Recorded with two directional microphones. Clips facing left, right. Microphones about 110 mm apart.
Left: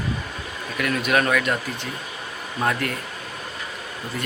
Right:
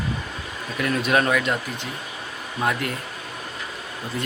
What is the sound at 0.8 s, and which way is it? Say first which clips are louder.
Speech: right 1 dB; 30° right (ahead or behind).